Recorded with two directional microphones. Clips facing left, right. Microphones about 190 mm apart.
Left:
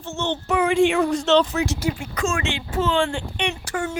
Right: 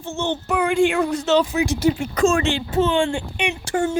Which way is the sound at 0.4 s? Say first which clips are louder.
Left 1 dB; centre (ahead or behind).